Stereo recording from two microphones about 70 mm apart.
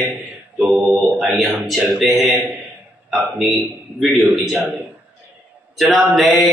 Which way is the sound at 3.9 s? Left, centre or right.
Centre.